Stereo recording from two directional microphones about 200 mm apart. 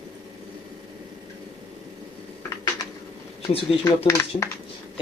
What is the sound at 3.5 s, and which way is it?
Speech, 30° left (ahead or behind).